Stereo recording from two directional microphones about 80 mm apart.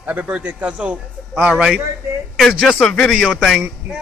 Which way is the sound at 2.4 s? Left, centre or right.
Centre.